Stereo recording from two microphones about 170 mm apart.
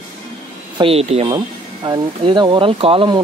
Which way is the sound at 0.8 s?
35° right (ahead or behind).